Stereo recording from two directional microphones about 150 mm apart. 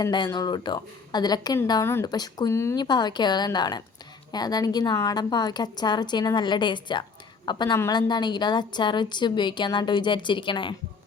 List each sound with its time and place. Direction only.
0.0 s a woman's voice: 25° left (ahead or behind)
2.8 s a woman's voice: 30° left (ahead or behind)